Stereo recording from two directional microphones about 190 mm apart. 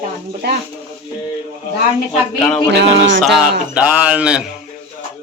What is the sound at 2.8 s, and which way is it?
Speech, 75° right (ahead or behind).